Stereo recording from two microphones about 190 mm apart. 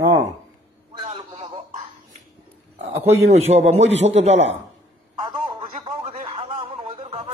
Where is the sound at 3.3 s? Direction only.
35° right (ahead or behind).